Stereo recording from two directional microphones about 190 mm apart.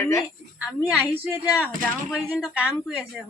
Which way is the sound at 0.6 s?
5° right (ahead or behind).